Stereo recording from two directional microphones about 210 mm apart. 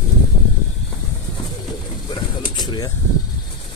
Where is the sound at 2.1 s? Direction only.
20° left (ahead or behind).